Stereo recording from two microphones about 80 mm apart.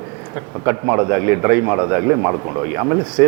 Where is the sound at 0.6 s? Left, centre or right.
Right.